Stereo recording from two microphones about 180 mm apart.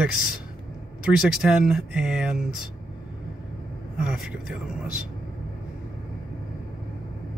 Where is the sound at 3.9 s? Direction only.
5° right (ahead or behind).